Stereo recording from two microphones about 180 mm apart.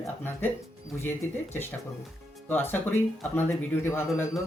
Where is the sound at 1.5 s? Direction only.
10° left (ahead or behind).